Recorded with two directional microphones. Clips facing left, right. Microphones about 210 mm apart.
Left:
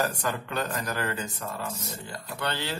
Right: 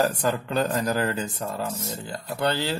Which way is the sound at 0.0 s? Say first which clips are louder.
Right 5 dB; 35° right (ahead or behind).